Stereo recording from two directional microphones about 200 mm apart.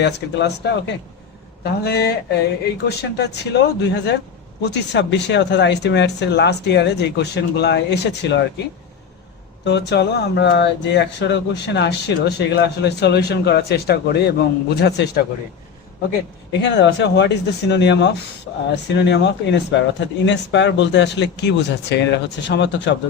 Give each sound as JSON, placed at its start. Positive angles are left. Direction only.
{"t": 0.0, "sound": "speech", "side_deg": 60}
{"t": 9.6, "sound": "speech", "side_deg": 60}
{"t": 16.5, "sound": "speech", "side_deg": 60}